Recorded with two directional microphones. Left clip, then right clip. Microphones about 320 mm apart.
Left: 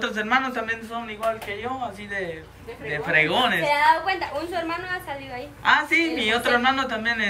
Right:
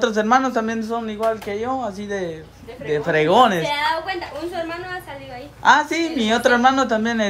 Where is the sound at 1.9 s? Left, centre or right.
Centre.